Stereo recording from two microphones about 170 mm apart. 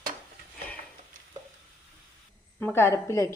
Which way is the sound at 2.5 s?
10° left (ahead or behind).